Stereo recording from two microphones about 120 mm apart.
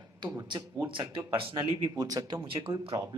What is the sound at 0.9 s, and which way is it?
Speech, 45° right (ahead or behind).